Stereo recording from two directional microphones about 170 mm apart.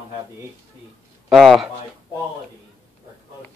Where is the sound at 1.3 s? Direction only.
Centre (ahead or behind).